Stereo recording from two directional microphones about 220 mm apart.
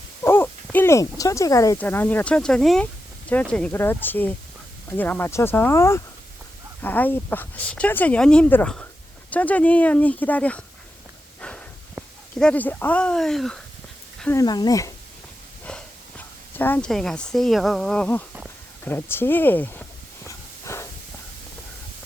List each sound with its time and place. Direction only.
0.2 s speech: 10° left (ahead or behind)
11.3 s a sound: 5° left (ahead or behind)
11.9 s speech: 5° left (ahead or behind)
20.2 s hiss: 15° left (ahead or behind)